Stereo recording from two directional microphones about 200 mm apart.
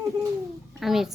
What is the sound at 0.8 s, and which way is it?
Speech, centre (ahead or behind).